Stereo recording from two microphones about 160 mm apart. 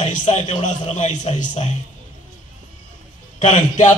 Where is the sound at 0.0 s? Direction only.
45° left (ahead or behind).